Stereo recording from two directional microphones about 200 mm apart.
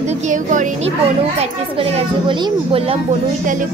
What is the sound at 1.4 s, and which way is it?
Speech, 30° right (ahead or behind).